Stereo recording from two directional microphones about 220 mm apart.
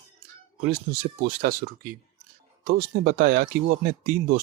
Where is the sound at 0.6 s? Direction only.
45° right (ahead or behind).